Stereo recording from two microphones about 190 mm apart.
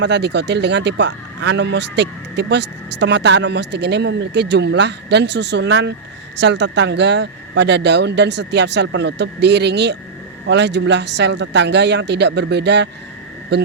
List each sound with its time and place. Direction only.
0.0 s speech: 65° right (ahead or behind)